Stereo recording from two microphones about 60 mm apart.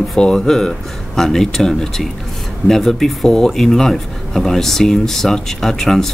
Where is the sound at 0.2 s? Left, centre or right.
Centre.